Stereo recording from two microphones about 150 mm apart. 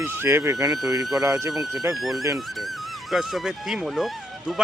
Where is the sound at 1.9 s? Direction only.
Centre (ahead or behind).